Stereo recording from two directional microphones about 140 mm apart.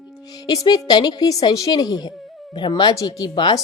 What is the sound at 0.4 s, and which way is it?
A woman's voice, 30° left (ahead or behind).